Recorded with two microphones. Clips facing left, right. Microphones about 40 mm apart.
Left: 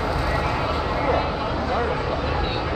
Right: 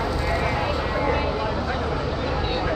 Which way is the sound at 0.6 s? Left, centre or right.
Centre.